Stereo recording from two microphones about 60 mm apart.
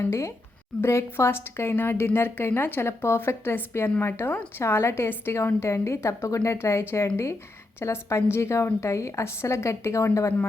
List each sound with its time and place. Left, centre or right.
0.0 s a woman's voice: left